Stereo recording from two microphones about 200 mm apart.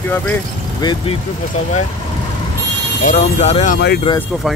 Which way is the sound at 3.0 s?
35° left (ahead or behind).